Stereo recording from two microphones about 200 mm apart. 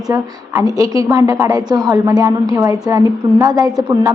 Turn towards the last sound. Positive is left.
turn(degrees=-15)  # may be behind; listen again after turning